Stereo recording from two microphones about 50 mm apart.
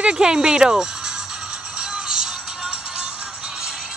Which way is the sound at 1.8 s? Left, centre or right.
Centre.